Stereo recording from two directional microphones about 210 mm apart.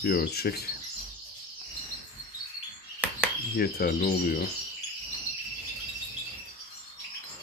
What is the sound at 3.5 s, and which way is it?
Speech, 45° left (ahead or behind).